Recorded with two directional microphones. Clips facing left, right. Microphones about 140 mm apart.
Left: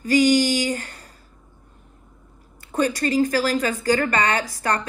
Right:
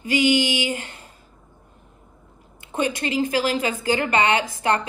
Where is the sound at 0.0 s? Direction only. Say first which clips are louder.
Left 3 dB; 45° left (ahead or behind).